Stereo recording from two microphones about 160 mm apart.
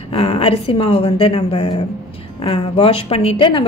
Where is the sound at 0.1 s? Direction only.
40° left (ahead or behind).